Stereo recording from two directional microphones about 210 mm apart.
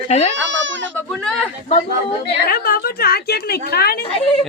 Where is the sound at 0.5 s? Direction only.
60° right (ahead or behind).